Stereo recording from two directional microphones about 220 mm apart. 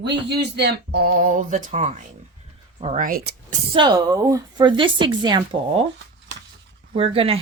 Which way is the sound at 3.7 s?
20° right (ahead or behind).